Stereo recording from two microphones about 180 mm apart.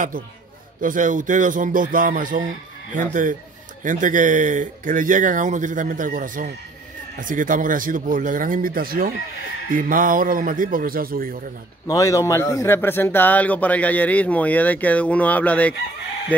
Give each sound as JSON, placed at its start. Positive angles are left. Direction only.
{"t": 0.7, "sound": "a man's voice", "side_deg": -45}
{"t": 11.9, "sound": "a man's voice", "side_deg": 20}